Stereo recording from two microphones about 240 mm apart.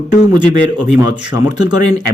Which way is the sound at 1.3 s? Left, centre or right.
Centre.